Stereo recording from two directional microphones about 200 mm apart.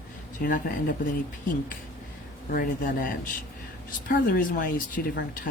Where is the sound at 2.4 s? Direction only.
45° left (ahead or behind).